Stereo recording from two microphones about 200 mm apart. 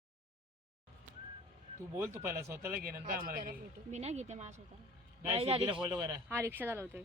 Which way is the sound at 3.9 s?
35° right (ahead or behind).